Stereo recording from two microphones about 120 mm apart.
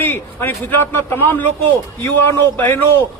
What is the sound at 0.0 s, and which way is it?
A man's voice, 20° left (ahead or behind).